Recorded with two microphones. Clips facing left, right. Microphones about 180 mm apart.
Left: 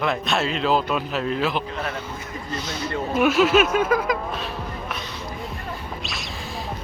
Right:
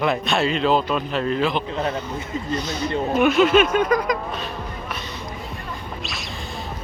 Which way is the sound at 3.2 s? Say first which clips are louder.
Right 1 dB; 5° left (ahead or behind).